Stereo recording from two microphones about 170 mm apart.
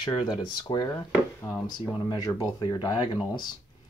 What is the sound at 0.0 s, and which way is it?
Speech, 25° left (ahead or behind).